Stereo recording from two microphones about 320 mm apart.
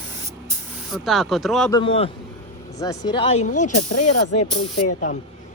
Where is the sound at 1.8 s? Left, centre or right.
Centre.